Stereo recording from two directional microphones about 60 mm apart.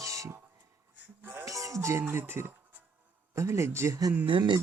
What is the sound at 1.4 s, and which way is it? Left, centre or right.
Music, right.